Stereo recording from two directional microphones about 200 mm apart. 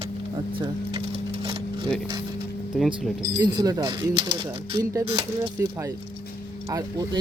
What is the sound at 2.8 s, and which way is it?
Speech, centre (ahead or behind).